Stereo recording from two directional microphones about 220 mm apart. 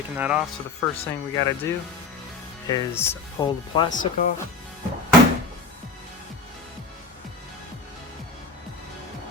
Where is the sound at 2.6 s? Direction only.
15° left (ahead or behind).